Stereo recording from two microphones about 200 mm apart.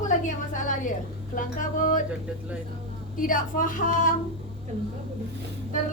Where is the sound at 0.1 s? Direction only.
40° left (ahead or behind).